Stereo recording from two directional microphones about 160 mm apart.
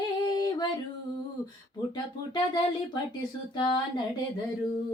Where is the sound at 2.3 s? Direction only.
25° left (ahead or behind).